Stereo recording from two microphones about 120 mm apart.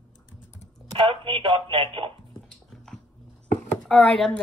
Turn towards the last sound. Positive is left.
turn(degrees=5)  # may be behind; listen again after turning